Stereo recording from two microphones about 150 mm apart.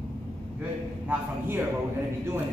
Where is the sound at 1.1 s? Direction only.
15° right (ahead or behind).